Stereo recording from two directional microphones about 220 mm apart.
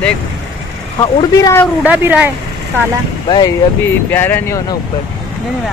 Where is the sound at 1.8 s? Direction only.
5° right (ahead or behind).